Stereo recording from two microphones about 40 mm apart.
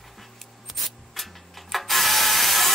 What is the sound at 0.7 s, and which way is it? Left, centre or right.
Ratchet, centre.